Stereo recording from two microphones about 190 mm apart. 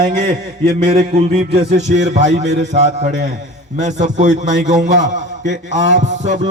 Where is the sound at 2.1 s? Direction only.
35° right (ahead or behind).